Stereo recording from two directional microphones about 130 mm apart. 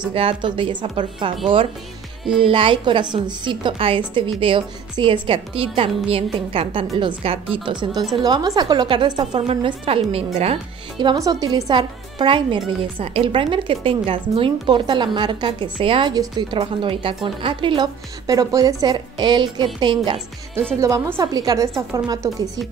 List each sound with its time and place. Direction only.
0.1 s a woman's voice: 45° right (ahead or behind)
8.2 s a woman's voice: 30° right (ahead or behind); by 10.6 s 50° right (ahead or behind)
11.1 s a woman's voice: 25° right (ahead or behind)
16.5 s a woman's voice: 45° right (ahead or behind)
20.8 s a woman's voice: 25° right (ahead or behind)